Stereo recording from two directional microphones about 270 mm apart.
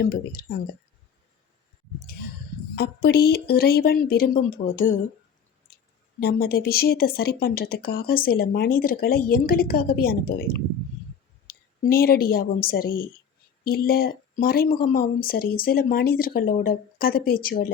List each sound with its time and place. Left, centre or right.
0.0 s speech: left
2.7 s speech: left
11.4 s a woman's voice: left